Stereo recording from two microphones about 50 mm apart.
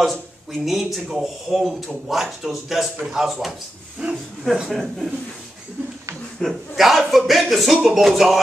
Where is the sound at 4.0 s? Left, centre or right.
Centre.